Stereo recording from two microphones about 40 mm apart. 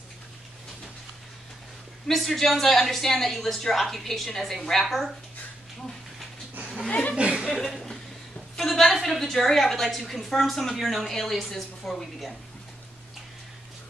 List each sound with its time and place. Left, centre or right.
2.0 s speech: centre
6.9 s a sound: left
7.2 s chuckle: right
7.6 s chuckle: centre
8.5 s speech: centre